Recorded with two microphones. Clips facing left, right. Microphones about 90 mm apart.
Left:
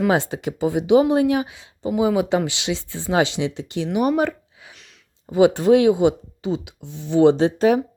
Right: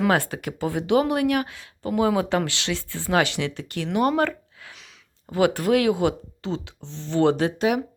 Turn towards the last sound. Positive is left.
turn(degrees=30)  # may be behind; listen again after turning